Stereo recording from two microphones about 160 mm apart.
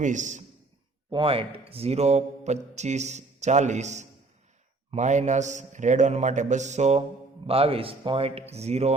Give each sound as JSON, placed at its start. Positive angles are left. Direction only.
{"t": 0.0, "sound": "a man's voice", "side_deg": -50}
{"t": 1.1, "sound": "a man's voice", "side_deg": -35}